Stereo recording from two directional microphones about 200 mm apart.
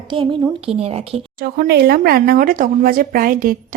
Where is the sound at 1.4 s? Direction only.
50° right (ahead or behind).